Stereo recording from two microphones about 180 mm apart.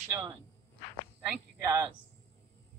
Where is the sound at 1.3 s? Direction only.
15° right (ahead or behind).